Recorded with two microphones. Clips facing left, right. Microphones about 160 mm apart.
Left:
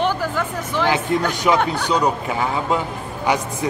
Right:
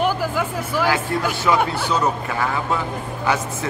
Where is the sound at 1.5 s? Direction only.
15° left (ahead or behind).